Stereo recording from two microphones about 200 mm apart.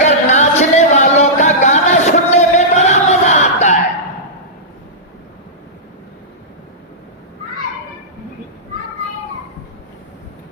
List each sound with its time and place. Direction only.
0.0 s music: 35° left (ahead or behind)